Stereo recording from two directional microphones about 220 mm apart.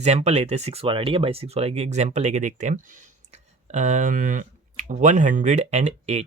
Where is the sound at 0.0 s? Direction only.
30° right (ahead or behind).